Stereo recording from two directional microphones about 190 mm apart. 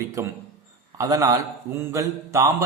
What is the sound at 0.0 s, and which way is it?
A man's voice, 15° right (ahead or behind).